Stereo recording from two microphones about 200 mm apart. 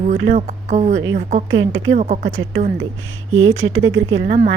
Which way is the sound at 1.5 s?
90° right.